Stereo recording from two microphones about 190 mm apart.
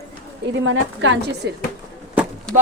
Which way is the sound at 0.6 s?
80° right.